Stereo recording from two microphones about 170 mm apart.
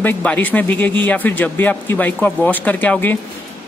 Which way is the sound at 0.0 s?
10° left (ahead or behind).